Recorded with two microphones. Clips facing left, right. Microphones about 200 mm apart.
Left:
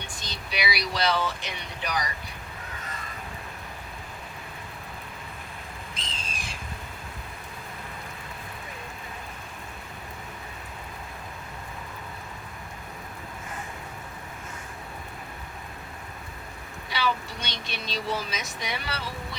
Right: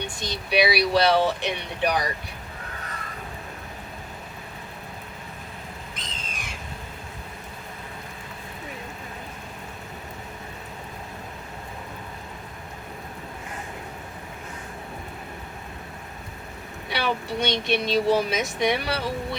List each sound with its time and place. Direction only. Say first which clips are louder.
0.2 s speech: right 11 dB; 60° right (ahead or behind)
6.0 s squawk: right 1 dB; 30° left (ahead or behind)
16.9 s vehicle: right 3 dB; 60° right (ahead or behind)
17.6 s speech: right 10 dB; 60° right (ahead or behind)